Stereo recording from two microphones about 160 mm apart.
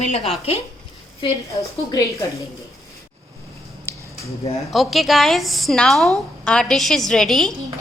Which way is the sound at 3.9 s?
15° left (ahead or behind).